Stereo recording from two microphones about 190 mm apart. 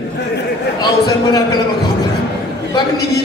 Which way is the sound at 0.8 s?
20° left (ahead or behind).